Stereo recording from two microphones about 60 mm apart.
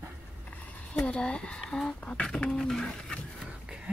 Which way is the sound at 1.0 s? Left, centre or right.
Centre.